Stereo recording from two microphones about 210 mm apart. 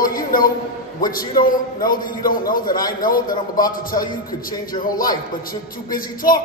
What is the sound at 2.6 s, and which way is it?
Speech, 20° left (ahead or behind).